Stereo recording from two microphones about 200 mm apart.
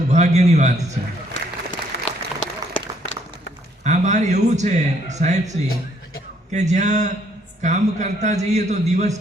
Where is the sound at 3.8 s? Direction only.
35° right (ahead or behind).